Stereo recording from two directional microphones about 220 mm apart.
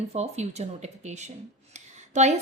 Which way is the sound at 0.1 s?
30° right (ahead or behind).